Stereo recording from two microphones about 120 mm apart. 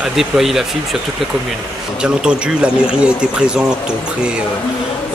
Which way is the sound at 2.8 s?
10° right (ahead or behind).